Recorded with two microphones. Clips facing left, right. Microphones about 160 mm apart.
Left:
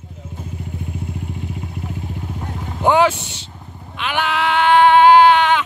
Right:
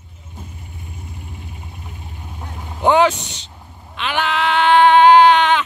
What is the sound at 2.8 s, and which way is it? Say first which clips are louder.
Speech: right 1 dB; 10° left (ahead or behind).